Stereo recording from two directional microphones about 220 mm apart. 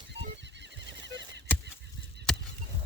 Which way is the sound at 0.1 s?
55° right (ahead or behind).